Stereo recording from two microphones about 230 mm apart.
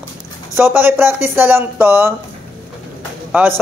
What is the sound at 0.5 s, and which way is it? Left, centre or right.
Speech, centre.